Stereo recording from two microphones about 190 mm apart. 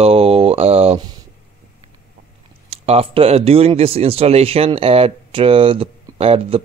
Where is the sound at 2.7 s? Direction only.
30° right (ahead or behind).